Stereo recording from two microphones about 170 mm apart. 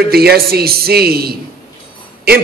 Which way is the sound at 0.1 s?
65° right (ahead or behind).